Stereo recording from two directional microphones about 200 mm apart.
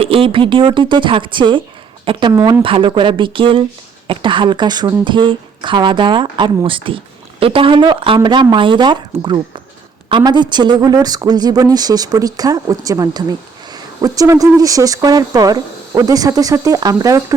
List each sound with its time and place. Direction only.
0.0 s speech: 25° right (ahead or behind)